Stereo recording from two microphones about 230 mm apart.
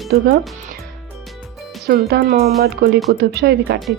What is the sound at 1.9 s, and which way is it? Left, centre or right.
Speech, right.